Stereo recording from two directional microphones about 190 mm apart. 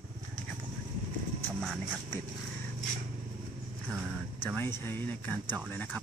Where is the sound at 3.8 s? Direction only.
10° right (ahead or behind).